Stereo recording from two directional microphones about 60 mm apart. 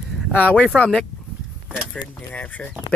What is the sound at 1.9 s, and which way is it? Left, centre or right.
Speech, left.